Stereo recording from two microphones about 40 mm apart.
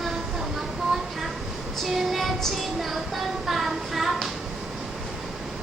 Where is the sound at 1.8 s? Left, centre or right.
Centre.